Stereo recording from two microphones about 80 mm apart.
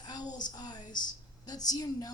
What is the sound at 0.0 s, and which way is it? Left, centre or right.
A woman's voice, left.